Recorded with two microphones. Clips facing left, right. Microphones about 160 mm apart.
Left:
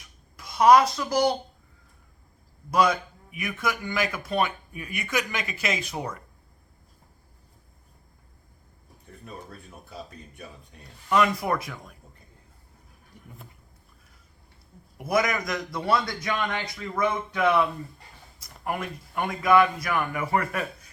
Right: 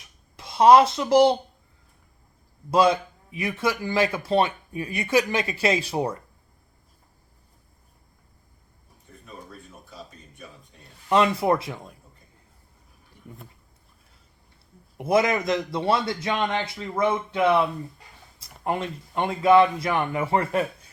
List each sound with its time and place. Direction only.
0.3 s a child's voice: 30° right (ahead or behind)
2.6 s a man's voice: 30° right (ahead or behind)
11.1 s a man's voice: 25° right (ahead or behind)
14.9 s a man's voice: 25° right (ahead or behind)